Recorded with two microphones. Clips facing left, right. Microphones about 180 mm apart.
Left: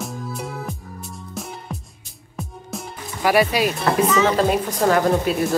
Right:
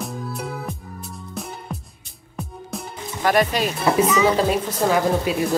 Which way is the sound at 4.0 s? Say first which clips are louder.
Left 1 dB; 5° right (ahead or behind).